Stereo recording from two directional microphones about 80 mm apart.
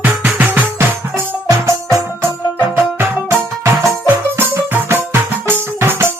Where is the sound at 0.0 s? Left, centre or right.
Right.